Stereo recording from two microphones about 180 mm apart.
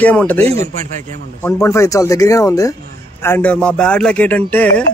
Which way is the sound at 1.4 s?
15° left (ahead or behind).